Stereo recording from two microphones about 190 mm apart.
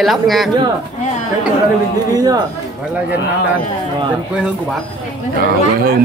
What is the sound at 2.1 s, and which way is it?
Speech, 20° right (ahead or behind).